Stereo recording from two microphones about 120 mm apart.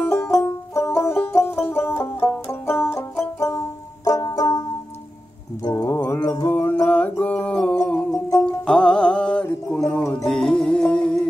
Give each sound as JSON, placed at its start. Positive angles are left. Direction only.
{"t": 0.0, "sound": "banjo", "side_deg": 10}
{"t": 5.6, "sound": "music", "side_deg": 30}
{"t": 6.5, "sound": "music", "side_deg": 10}